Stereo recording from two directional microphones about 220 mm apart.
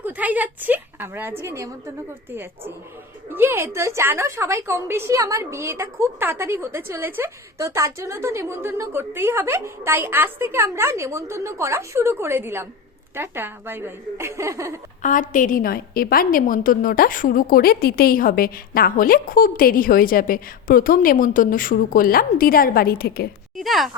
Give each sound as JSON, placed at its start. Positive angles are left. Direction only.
{"t": 0.0, "sound": "a woman's voice", "side_deg": -5}
{"t": 15.0, "sound": "a woman's voice", "side_deg": 35}
{"t": 23.6, "sound": "speech", "side_deg": 0}